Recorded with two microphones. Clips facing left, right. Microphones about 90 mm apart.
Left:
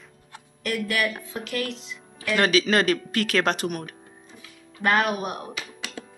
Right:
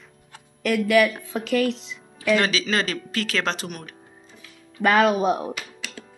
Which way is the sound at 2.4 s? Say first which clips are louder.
Left 3 dB; 50° left (ahead or behind).